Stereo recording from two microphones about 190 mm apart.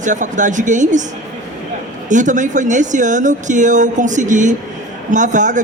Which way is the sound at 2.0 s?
40° right (ahead or behind).